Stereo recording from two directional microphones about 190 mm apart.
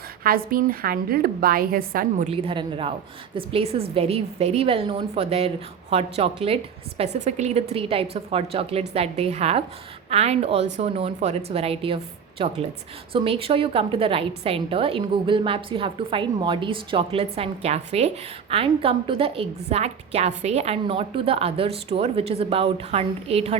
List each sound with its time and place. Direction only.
0.2 s a woman's voice: 50° right (ahead or behind)
2.3 s a woman's voice: 30° right (ahead or behind)